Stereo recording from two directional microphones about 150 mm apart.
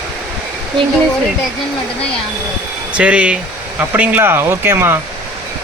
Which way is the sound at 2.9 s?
10° right (ahead or behind).